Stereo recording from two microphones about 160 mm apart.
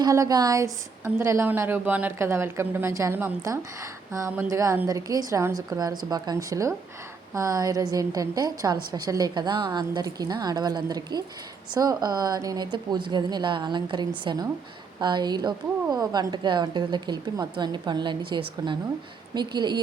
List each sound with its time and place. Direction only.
0.0 s a woman's voice: 20° right (ahead or behind)